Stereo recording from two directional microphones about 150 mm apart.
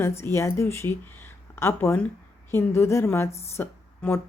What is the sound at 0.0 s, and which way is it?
A woman's voice, 15° left (ahead or behind).